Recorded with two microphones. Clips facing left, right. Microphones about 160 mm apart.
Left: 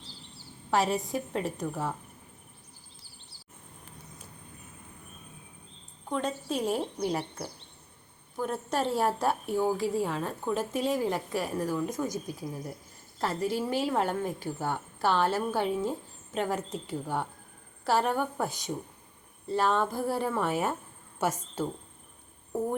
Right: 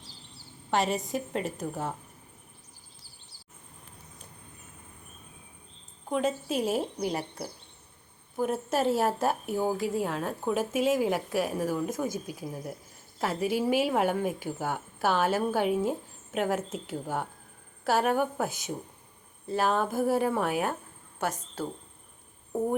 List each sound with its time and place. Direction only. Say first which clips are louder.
0.7 s a woman's voice: even; centre (ahead or behind)
6.1 s a woman's voice: right 3 dB; 10° right (ahead or behind)